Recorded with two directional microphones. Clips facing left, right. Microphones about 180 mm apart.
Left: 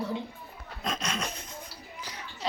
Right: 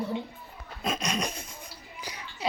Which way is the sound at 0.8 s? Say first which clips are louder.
Right 3 dB; 10° right (ahead or behind).